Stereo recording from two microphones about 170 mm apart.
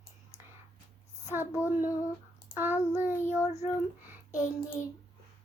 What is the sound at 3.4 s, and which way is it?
Child singing, 40° left (ahead or behind).